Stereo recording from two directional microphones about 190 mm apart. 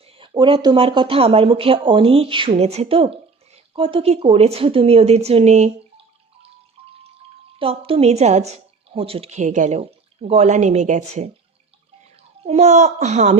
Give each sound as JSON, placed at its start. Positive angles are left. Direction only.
{"t": 0.2, "sound": "a woman's voice", "side_deg": -25}
{"t": 7.6, "sound": "a woman's voice", "side_deg": -30}
{"t": 12.4, "sound": "a woman's voice", "side_deg": -35}